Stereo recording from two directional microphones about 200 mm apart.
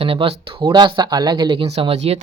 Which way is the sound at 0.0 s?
25° right (ahead or behind).